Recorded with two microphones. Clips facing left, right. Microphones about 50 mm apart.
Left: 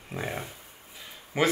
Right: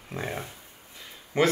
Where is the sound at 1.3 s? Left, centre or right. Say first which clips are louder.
Right 2 dB; centre.